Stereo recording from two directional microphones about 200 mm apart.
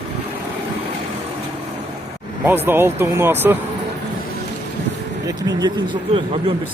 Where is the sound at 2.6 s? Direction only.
10° right (ahead or behind).